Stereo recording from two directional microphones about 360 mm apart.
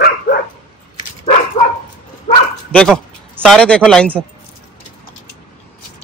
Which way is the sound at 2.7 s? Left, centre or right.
Centre.